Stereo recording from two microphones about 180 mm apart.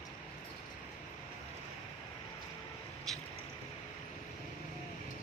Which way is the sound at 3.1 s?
Centre (ahead or behind).